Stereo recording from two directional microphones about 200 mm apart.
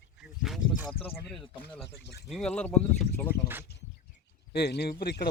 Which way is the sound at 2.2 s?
Centre (ahead or behind).